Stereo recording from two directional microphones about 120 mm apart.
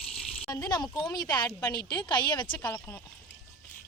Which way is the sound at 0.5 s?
30° left (ahead or behind).